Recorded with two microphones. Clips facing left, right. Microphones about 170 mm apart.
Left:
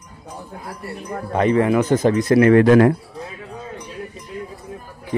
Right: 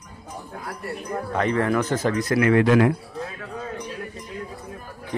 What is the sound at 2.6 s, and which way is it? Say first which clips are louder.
Speech: left 5 dB; 45° left (ahead or behind).